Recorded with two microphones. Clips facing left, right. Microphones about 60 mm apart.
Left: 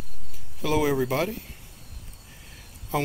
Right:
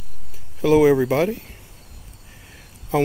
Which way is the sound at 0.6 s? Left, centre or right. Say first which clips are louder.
Right 9 dB; right.